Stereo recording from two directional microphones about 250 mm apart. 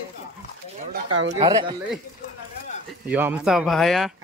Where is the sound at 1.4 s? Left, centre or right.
Centre.